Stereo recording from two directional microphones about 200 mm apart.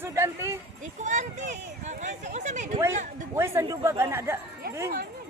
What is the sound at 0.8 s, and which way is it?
Speech, 40° right (ahead or behind).